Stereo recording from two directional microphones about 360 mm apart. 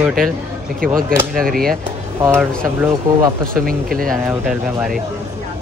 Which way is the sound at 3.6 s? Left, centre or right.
Right.